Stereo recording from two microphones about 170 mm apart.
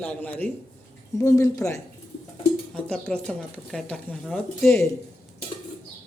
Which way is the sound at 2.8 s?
5° left (ahead or behind).